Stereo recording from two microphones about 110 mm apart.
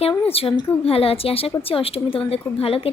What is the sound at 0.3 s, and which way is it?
A woman's voice, 60° left (ahead or behind).